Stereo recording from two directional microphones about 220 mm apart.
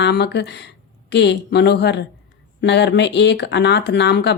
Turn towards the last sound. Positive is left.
turn(degrees=50)  # may be behind; listen again after turning